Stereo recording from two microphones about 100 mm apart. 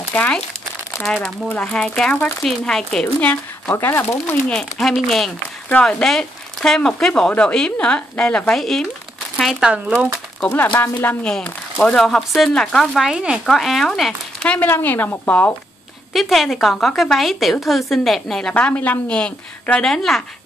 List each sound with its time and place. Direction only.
0.1 s speech: 15° left (ahead or behind)
0.9 s a woman's voice: 5° left (ahead or behind); by 4.4 s 25° left (ahead or behind)
4.5 s a woman's voice: 5° left (ahead or behind)
9.4 s speech: 5° right (ahead or behind)
10.4 s speech: 15° left (ahead or behind)
13.0 s a woman's voice: 5° right (ahead or behind)
14.4 s a sound: 10° left (ahead or behind)
14.7 s speech: 20° left (ahead or behind)
16.1 s a woman's voice: centre (ahead or behind)